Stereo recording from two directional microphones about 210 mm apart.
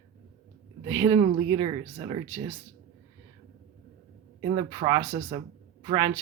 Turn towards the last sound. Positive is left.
turn(degrees=-20)  # may be behind; listen again after turning